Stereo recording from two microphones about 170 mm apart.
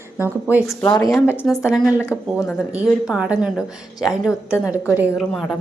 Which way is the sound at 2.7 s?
5° right (ahead or behind).